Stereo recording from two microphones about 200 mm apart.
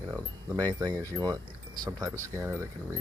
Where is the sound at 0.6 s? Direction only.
20° right (ahead or behind).